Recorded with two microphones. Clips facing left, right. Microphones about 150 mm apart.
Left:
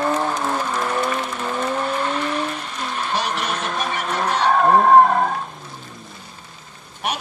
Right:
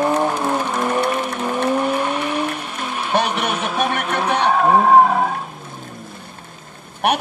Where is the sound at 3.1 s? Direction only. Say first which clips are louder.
Right 7 dB; 60° right (ahead or behind).